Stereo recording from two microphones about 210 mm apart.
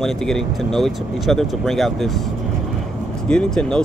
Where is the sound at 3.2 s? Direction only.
5° left (ahead or behind).